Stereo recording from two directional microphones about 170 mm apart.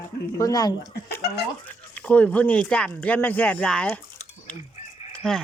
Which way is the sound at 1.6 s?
10° left (ahead or behind).